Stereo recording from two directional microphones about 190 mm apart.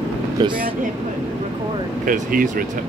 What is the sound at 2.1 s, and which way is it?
Speech, 45° right (ahead or behind).